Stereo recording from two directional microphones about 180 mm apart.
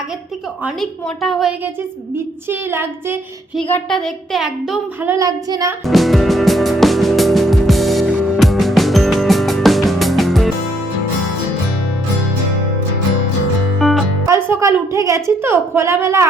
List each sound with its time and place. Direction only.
0.6 s child singing: centre (ahead or behind)
3.5 s child singing: 5° left (ahead or behind)
5.0 s child singing: 20° right (ahead or behind)
5.8 s music: centre (ahead or behind)
13.7 s music: centre (ahead or behind)
14.3 s a woman's voice: 15° right (ahead or behind)